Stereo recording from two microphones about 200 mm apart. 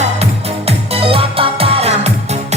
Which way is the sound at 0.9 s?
30° right (ahead or behind).